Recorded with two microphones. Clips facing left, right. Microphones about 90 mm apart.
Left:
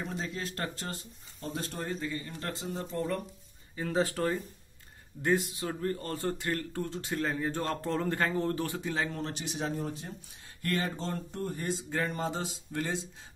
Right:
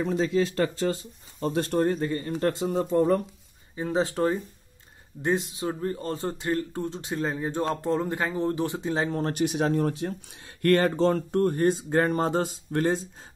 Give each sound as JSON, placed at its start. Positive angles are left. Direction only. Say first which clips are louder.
{"t": 0.0, "sound": "speech", "louder": "right 12 dB", "side_deg": -90}
{"t": 1.4, "sound": "speech", "louder": "right 13 dB", "side_deg": -70}
{"t": 2.3, "sound": "speech", "louder": "right 12 dB", "side_deg": -65}
{"t": 3.7, "sound": "speech", "louder": "right 4 dB", "side_deg": -20}
{"t": 9.2, "sound": "speech", "louder": "right 10 dB", "side_deg": -55}